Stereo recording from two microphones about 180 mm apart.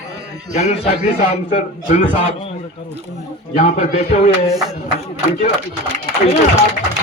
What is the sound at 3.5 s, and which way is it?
Speech, 45° left (ahead or behind).